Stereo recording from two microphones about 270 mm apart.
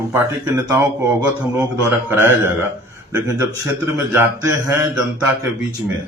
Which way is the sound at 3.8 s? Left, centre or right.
Centre.